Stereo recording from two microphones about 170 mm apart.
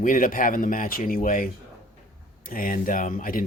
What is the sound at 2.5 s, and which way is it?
Speech, 55° left (ahead or behind).